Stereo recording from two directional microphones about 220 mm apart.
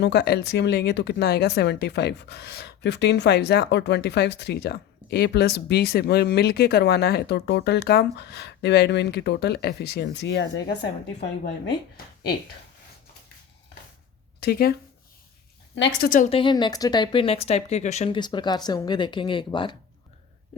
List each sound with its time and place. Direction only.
0.0 s speech: 50° left (ahead or behind)
14.4 s speech: 45° left (ahead or behind)
16.0 s a woman's voice: 35° left (ahead or behind)
16.4 s speech: 20° left (ahead or behind)
18.2 s speech: 20° left (ahead or behind)